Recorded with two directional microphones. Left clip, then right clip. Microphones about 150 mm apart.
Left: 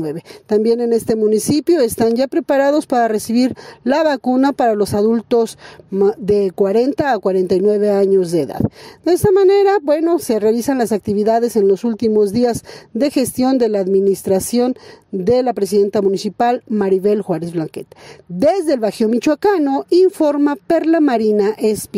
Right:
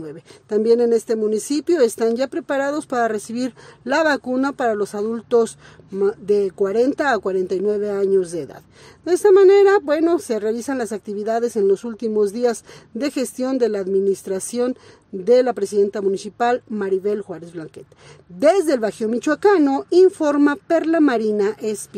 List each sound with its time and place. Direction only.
0.0 s speech: 40° left (ahead or behind)